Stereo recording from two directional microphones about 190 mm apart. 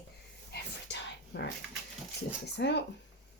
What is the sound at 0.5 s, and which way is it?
Whispering, 60° left (ahead or behind).